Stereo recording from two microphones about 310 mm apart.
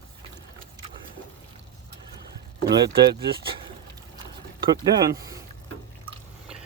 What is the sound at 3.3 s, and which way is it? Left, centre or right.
Speech, centre.